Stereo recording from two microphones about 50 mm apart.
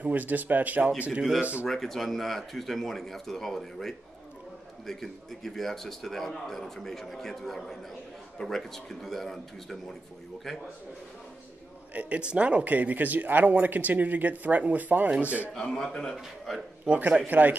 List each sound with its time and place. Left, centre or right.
0.0 s speech: right
1.7 s a man's voice: centre
11.9 s speech: right
15.9 s a man's voice: centre
16.8 s speech: right